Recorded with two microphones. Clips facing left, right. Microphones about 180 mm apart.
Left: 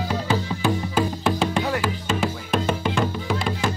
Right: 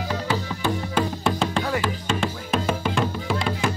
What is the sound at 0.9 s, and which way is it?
Music, 5° left (ahead or behind).